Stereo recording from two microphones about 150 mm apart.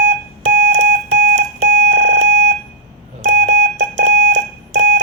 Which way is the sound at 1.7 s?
85° right.